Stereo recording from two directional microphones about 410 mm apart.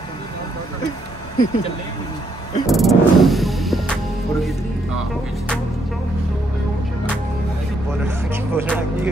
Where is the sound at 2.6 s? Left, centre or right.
Centre.